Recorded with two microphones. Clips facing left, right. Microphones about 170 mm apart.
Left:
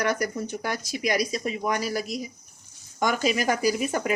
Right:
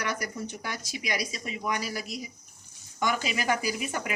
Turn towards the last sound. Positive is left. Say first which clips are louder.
# left 7 dB
turn(degrees=40)  # may be behind; listen again after turning